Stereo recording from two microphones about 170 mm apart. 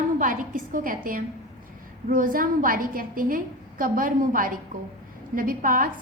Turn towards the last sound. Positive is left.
turn(degrees=-55)  # may be behind; listen again after turning